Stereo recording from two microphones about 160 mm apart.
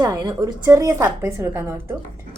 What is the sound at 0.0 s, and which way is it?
A woman's voice, 20° right (ahead or behind).